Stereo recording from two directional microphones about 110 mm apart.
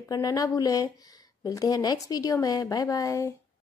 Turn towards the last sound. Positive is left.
turn(degrees=30)  # may be behind; listen again after turning